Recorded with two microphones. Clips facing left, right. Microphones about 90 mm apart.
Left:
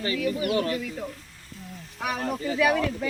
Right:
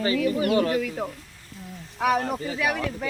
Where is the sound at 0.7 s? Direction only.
55° right (ahead or behind).